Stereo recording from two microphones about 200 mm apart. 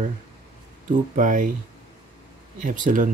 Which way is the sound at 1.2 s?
40° right (ahead or behind).